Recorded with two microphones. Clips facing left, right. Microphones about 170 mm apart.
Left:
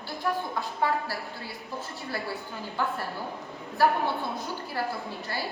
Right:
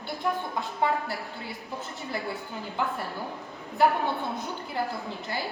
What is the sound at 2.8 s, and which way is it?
A woman's voice, 20° right (ahead or behind).